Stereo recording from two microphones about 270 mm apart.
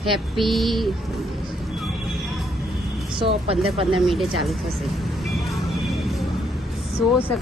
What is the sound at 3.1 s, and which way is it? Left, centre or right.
Speech, centre.